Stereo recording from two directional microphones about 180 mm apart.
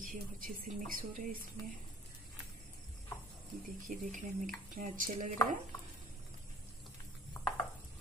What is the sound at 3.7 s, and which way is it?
Speech, 45° right (ahead or behind).